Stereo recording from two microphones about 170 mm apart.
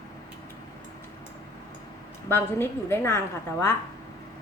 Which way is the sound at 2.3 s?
15° left (ahead or behind).